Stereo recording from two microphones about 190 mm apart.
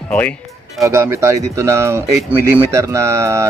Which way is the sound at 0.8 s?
15° right (ahead or behind).